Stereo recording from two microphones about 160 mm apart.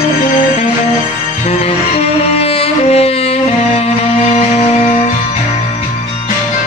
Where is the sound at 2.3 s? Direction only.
40° left (ahead or behind).